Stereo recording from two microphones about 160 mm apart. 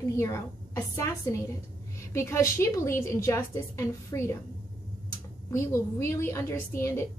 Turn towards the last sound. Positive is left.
turn(degrees=15)  # may be behind; listen again after turning